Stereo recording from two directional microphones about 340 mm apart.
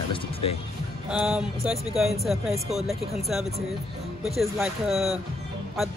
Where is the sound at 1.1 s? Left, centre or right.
Centre.